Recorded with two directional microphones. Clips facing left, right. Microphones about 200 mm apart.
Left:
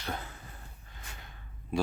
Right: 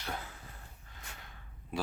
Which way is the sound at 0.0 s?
5° right (ahead or behind).